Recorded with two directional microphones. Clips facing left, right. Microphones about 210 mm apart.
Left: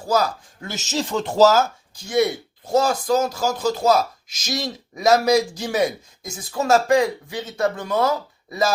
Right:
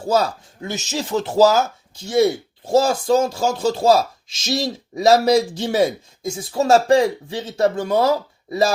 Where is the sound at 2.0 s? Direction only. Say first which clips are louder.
Right 3 dB; 25° right (ahead or behind).